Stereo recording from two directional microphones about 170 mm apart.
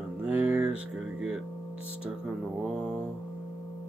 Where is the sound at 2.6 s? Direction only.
5° right (ahead or behind).